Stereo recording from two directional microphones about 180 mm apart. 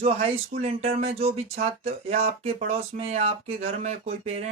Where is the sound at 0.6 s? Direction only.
35° right (ahead or behind).